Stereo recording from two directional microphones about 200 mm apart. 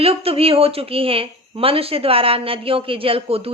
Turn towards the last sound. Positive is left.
turn(degrees=-30)  # may be behind; listen again after turning